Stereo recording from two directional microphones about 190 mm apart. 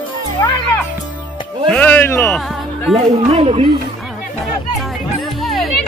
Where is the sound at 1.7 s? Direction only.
10° left (ahead or behind).